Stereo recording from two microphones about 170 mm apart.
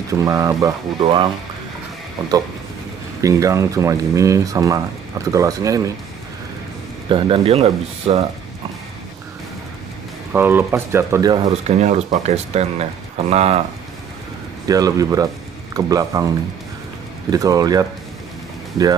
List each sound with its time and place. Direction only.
0.1 s speech: 20° right (ahead or behind)
3.2 s speech: 20° right (ahead or behind)
7.1 s speech: 30° right (ahead or behind)
10.3 s speech: 10° right (ahead or behind)
11.6 s speech: 40° right (ahead or behind)
14.7 s speech: 20° right (ahead or behind)